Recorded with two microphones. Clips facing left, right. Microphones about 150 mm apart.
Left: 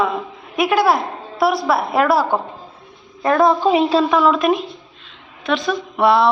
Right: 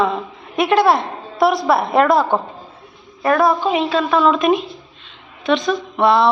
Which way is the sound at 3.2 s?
20° left (ahead or behind).